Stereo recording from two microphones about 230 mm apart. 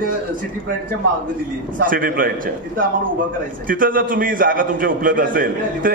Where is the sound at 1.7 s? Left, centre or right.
Right.